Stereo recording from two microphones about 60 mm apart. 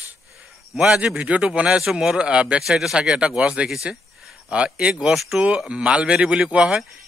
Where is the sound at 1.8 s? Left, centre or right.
Centre.